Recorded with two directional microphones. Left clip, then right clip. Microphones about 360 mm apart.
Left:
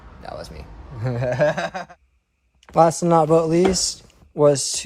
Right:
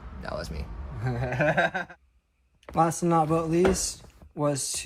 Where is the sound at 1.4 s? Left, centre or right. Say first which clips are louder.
Left 2 dB; centre.